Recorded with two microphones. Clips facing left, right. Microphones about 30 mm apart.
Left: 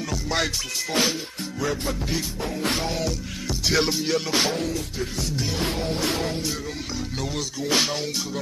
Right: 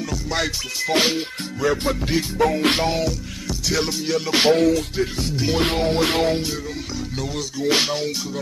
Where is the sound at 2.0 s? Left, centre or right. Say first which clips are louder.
Right 5 dB; right.